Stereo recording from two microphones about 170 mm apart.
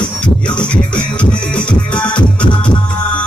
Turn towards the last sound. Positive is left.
turn(degrees=5)  # may be behind; listen again after turning